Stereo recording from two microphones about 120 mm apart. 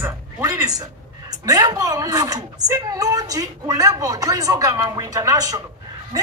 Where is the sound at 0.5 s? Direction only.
30° right (ahead or behind).